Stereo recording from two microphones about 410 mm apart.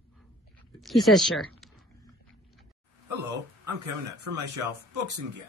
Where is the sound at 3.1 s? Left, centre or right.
Right.